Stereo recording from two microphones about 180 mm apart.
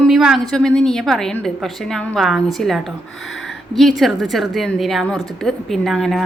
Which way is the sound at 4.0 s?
Centre (ahead or behind).